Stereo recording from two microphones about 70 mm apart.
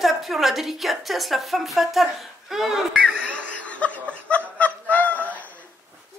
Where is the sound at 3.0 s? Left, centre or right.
Centre.